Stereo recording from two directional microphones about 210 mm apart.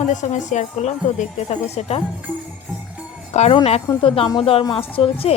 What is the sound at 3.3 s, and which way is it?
Speech, 30° left (ahead or behind).